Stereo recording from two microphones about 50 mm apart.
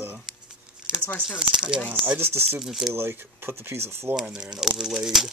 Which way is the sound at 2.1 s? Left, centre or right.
Right.